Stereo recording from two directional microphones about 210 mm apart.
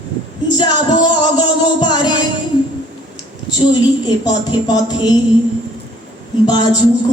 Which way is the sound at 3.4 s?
20° left (ahead or behind).